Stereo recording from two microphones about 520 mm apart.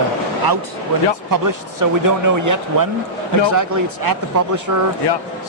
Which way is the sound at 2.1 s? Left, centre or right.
Right.